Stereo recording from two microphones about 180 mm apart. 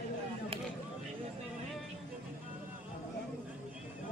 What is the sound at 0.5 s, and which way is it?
Vehicle, 30° right (ahead or behind).